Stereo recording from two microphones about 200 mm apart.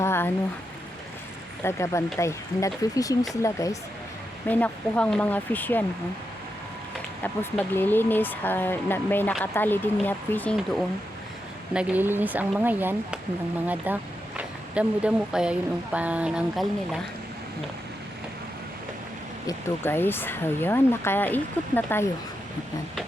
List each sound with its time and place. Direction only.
0.0 s a sound: 10° left (ahead or behind)
1.6 s speech: 15° left (ahead or behind)
7.2 s speech: 10° left (ahead or behind)
11.7 s speech: 5° right (ahead or behind)
19.5 s speech: 10° left (ahead or behind)